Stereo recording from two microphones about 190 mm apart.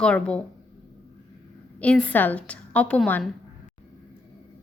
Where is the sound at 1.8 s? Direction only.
5° left (ahead or behind).